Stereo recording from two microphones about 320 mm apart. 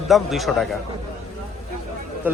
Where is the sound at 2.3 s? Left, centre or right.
Centre.